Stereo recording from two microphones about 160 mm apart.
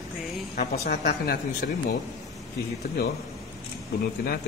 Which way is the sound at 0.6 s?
75° left (ahead or behind).